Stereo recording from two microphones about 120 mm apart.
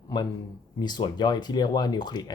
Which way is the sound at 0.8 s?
35° left (ahead or behind).